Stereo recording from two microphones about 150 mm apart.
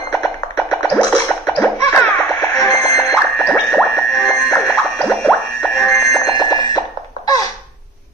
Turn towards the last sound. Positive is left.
turn(degrees=25)  # may be behind; listen again after turning